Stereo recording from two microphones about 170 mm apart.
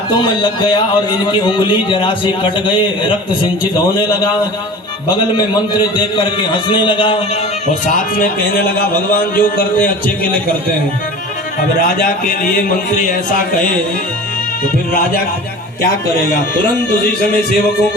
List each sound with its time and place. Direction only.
0.1 s a man's voice: 25° left (ahead or behind)
5.5 s a man's voice: 25° left (ahead or behind)
7.7 s a man's voice: 50° left (ahead or behind)
11.8 s a man's voice: 50° left (ahead or behind)